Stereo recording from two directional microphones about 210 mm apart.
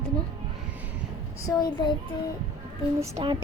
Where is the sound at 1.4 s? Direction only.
20° left (ahead or behind).